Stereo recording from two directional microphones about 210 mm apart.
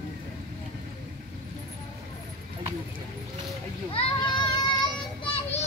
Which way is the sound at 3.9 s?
20° left (ahead or behind).